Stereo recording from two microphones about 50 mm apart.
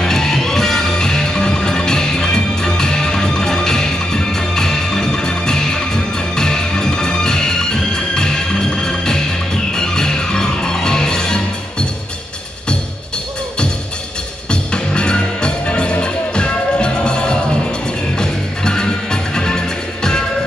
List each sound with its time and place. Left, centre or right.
0.0 s music: centre
14.5 s music: centre